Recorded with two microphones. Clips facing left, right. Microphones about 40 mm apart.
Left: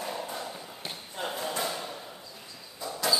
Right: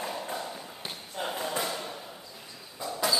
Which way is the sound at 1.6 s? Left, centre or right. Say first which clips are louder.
Even; centre.